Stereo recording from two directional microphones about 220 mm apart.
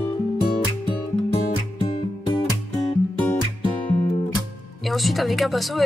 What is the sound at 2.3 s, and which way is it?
Music, 20° left (ahead or behind).